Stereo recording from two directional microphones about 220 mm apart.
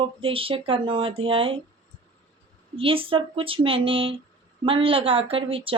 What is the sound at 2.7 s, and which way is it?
Speech, 25° right (ahead or behind).